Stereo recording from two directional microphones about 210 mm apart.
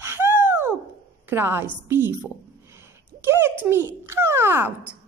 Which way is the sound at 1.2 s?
10° right (ahead or behind).